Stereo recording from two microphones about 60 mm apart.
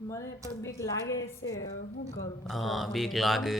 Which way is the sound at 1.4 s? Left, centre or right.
Left.